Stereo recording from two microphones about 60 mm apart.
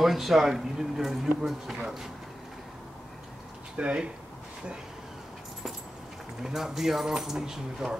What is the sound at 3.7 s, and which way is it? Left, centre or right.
Speech, centre.